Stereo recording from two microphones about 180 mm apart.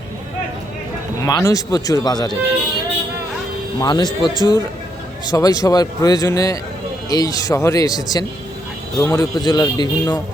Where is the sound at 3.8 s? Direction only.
25° left (ahead or behind).